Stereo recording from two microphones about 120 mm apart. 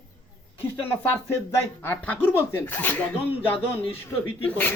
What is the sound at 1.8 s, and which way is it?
Speech, 15° left (ahead or behind).